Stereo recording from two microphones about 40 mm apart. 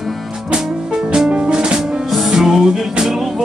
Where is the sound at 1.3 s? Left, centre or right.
Right.